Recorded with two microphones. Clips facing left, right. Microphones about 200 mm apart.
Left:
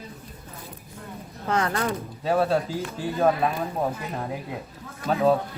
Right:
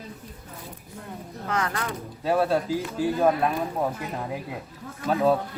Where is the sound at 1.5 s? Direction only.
30° left (ahead or behind).